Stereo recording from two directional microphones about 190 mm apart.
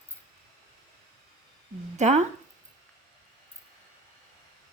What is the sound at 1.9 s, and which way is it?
Speech, 40° right (ahead or behind).